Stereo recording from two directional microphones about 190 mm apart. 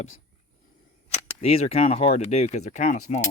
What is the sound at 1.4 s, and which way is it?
Speech, 35° left (ahead or behind).